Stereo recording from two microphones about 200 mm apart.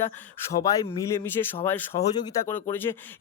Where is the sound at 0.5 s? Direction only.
15° left (ahead or behind).